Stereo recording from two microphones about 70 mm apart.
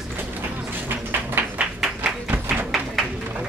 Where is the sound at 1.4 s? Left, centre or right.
Right.